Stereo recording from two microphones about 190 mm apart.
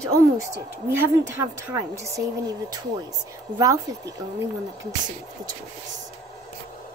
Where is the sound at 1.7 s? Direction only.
15° right (ahead or behind).